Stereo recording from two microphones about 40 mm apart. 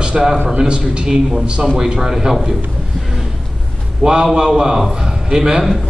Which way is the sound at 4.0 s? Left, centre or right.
Right.